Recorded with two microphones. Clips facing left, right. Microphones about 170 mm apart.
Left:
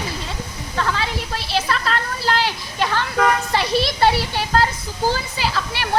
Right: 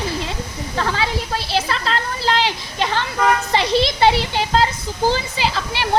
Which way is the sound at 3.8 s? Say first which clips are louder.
Right 1 dB; 20° right (ahead or behind).